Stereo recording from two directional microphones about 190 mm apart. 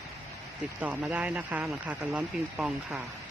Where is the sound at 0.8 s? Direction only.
10° right (ahead or behind).